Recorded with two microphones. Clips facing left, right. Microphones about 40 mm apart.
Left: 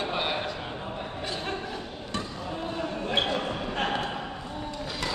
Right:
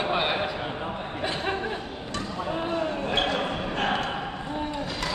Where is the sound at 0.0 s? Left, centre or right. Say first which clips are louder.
Right 4 dB; centre.